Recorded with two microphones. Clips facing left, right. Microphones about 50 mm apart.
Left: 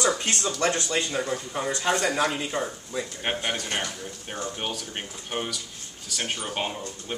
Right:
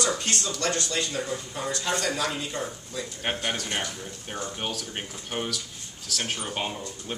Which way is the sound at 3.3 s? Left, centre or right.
Centre.